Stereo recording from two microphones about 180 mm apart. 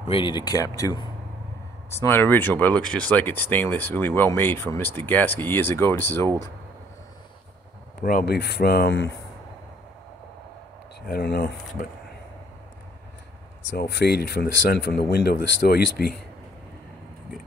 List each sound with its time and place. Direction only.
0.1 s speech: 25° left (ahead or behind)
8.0 s speech: 50° left (ahead or behind); by 9.1 s 75° left (ahead or behind)
11.1 s speech: 60° left (ahead or behind)
13.7 s speech: 65° left (ahead or behind)